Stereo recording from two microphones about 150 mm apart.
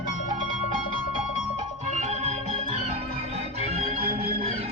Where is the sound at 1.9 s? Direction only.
45° right (ahead or behind).